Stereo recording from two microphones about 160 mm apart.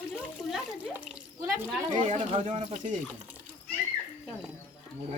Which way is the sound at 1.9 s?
50° right (ahead or behind).